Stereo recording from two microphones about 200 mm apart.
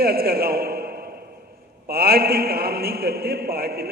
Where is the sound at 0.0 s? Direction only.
50° right (ahead or behind).